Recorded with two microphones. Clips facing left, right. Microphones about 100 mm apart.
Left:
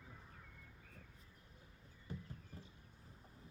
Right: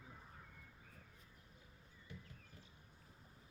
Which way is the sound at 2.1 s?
40° left (ahead or behind).